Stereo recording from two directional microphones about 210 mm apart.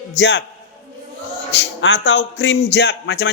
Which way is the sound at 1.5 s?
60° left (ahead or behind).